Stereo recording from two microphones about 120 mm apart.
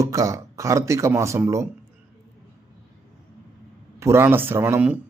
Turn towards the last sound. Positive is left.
turn(degrees=-15)  # may be behind; listen again after turning